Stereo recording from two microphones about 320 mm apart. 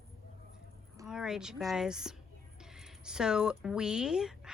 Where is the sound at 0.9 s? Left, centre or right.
Centre.